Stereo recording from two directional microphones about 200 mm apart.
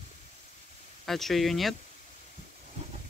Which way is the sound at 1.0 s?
Centre (ahead or behind).